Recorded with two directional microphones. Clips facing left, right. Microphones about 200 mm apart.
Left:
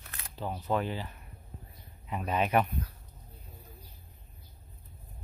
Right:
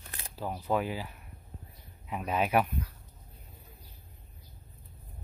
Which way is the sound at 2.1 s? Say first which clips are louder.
Even; 5° right (ahead or behind).